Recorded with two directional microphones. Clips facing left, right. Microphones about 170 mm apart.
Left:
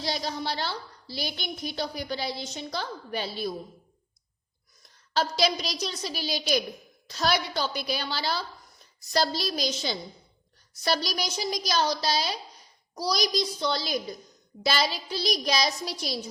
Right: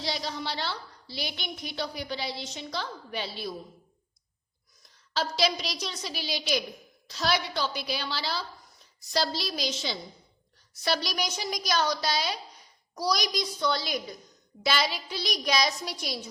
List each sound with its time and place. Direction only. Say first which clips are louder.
0.0 s a woman's voice: left 2 dB; 45° left (ahead or behind)
5.1 s a woman's voice: left 2 dB; 45° left (ahead or behind)